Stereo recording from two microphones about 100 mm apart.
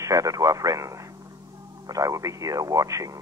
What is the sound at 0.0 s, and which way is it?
Speech, 35° right (ahead or behind).